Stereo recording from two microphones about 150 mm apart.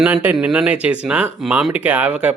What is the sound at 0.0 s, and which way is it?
Speech, 10° right (ahead or behind).